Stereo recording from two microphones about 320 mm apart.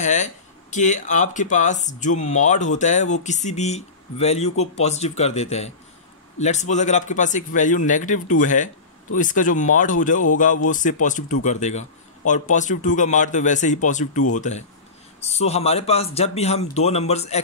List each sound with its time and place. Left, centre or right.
0.0 s speech: left